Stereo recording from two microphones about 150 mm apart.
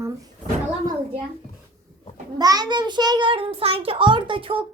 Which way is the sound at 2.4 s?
25° right (ahead or behind).